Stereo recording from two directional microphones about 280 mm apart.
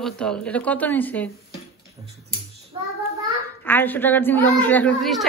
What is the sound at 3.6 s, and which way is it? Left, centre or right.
A woman's voice, centre.